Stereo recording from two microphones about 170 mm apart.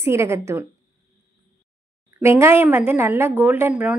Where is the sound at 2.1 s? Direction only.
15° right (ahead or behind).